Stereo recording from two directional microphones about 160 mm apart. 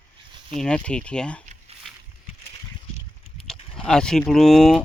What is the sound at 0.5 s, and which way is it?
Speech, 5° left (ahead or behind).